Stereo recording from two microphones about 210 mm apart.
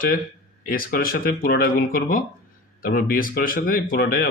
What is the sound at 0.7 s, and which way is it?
Speech, 45° left (ahead or behind).